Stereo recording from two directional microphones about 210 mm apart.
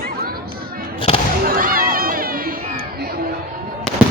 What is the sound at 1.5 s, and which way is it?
Run, 45° right (ahead or behind).